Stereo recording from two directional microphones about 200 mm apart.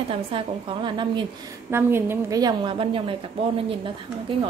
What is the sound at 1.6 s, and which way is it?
A woman's voice, 10° right (ahead or behind).